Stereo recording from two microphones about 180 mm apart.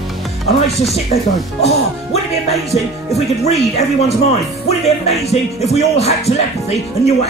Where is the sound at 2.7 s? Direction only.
35° left (ahead or behind).